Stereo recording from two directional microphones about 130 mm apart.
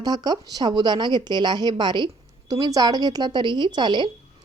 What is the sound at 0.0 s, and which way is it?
A woman's voice, 30° right (ahead or behind).